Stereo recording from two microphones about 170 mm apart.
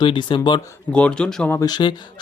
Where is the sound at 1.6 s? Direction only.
25° left (ahead or behind).